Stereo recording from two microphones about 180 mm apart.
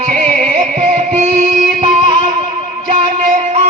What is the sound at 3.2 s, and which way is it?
Music, 40° right (ahead or behind).